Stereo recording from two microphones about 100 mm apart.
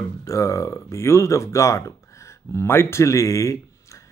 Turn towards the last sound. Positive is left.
turn(degrees=30)  # may be behind; listen again after turning